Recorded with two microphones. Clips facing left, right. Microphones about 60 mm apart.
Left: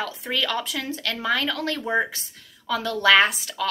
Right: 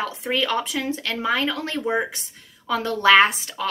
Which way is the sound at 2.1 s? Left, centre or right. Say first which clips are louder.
Right 1 dB; right.